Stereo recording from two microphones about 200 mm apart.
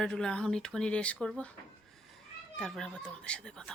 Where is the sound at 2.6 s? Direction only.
5° left (ahead or behind).